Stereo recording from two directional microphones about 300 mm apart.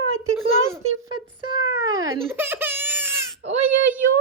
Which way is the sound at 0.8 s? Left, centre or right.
Right.